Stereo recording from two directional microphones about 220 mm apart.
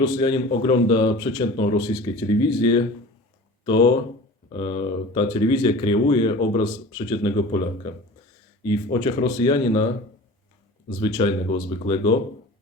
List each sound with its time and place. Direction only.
0.0 s speech: 20° left (ahead or behind)
8.6 s speech: 20° left (ahead or behind)
11.0 s speech: 20° left (ahead or behind)